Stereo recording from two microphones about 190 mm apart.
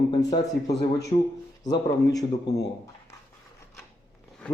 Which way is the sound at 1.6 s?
20° left (ahead or behind).